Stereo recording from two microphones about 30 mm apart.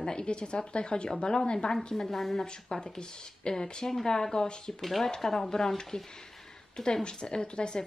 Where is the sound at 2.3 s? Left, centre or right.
Left.